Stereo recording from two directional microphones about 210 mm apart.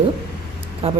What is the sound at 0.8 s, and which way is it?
Speech, 30° right (ahead or behind).